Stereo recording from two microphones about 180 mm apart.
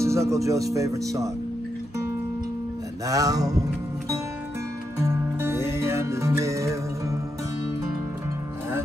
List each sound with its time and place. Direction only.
0.0 s speech: 15° right (ahead or behind)
3.1 s a sound: 20° right (ahead or behind)
4.9 s music: 15° right (ahead or behind)